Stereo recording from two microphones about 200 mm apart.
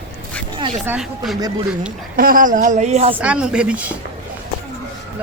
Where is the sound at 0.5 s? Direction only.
25° right (ahead or behind).